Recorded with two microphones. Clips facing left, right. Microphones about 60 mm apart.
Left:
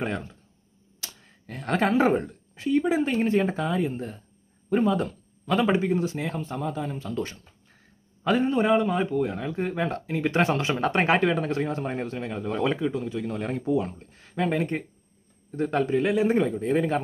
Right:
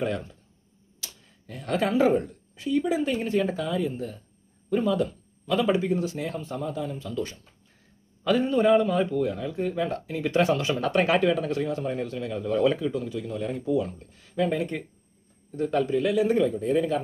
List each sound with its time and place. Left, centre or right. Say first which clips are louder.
0.0 s a man's voice: right 1 dB; left
13.3 s speech: even; left
13.7 s a man's voice: even; left